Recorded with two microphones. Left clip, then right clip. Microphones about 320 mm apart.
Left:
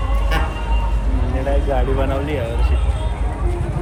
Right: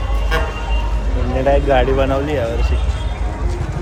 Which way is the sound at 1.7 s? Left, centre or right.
Centre.